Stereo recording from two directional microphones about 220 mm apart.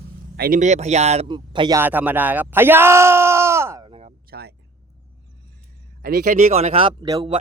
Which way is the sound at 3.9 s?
30° right (ahead or behind).